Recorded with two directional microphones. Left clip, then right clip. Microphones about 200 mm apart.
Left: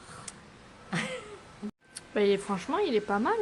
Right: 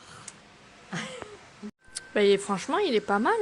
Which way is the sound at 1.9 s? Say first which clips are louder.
Right 4 dB; 20° right (ahead or behind).